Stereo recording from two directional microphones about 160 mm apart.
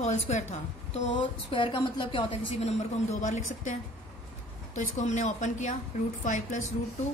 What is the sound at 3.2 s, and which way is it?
Speech, 50° left (ahead or behind).